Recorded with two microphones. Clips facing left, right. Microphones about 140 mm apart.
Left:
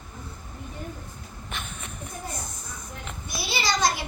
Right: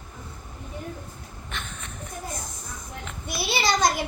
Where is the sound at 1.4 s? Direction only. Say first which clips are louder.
Even; 10° left (ahead or behind).